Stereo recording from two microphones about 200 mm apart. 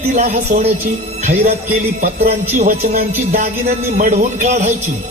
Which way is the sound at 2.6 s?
35° right (ahead or behind).